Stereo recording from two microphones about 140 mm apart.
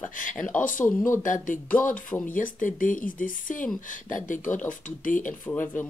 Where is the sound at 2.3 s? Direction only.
70° left (ahead or behind).